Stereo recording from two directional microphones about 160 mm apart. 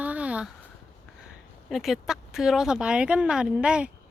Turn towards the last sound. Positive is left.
turn(degrees=-5)  # may be behind; listen again after turning